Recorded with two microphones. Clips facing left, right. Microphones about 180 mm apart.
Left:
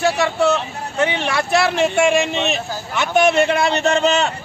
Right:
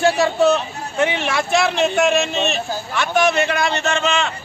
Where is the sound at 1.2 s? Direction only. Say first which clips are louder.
Left 1 dB; centre (ahead or behind); by 4.3 s 40° left (ahead or behind).